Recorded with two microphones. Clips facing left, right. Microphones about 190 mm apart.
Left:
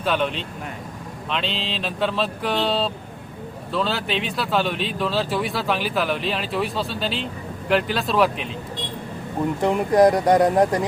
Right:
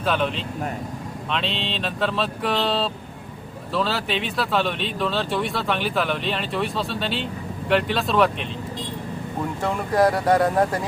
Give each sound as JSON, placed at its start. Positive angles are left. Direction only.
{"t": 0.0, "sound": "speech", "side_deg": 0}
{"t": 9.6, "sound": "speech", "side_deg": 15}